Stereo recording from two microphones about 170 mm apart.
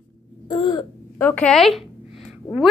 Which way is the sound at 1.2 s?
10° left (ahead or behind).